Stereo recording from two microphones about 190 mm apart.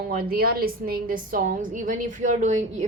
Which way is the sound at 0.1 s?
50° right (ahead or behind).